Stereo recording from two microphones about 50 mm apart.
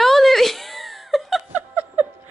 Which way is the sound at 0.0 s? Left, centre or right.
Centre.